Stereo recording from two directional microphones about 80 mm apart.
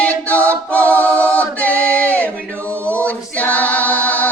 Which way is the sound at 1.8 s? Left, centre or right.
Centre.